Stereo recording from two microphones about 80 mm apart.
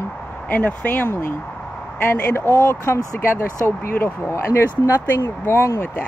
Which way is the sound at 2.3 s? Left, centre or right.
Left.